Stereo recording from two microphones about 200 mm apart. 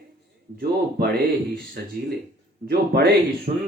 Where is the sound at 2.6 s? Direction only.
50° right (ahead or behind).